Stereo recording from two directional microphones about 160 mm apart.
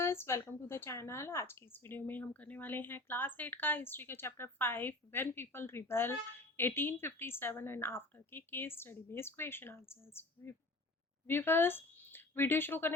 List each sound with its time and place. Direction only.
0.0 s speech: 15° left (ahead or behind)